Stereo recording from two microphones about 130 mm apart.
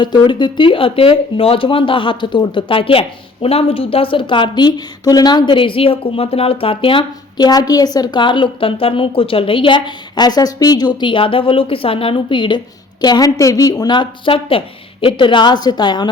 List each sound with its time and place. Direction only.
0.0 s speech: 35° left (ahead or behind)